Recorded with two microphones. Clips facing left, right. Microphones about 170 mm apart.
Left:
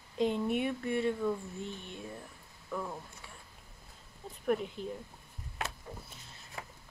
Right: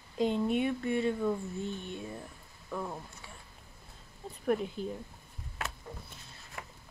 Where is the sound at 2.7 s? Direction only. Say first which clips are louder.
Right 1 dB; 15° right (ahead or behind).